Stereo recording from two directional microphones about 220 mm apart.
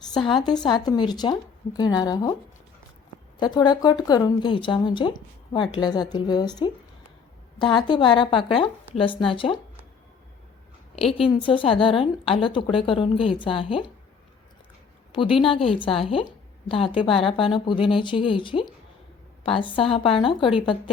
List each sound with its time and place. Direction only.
0.4 s a woman's voice: 20° left (ahead or behind)
3.3 s a woman's voice: 20° left (ahead or behind)
11.2 s a woman's voice: 25° left (ahead or behind)
15.1 s a woman's voice: 25° left (ahead or behind)